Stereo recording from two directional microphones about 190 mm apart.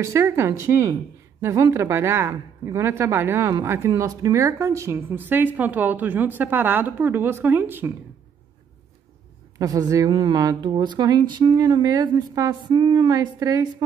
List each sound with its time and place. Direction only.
0.0 s a woman's voice: 15° right (ahead or behind)
9.6 s speech: 20° right (ahead or behind)